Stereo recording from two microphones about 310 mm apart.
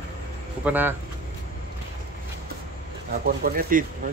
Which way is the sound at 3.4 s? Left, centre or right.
Right.